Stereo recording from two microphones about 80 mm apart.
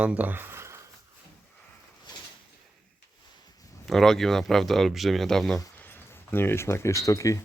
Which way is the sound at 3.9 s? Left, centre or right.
Centre.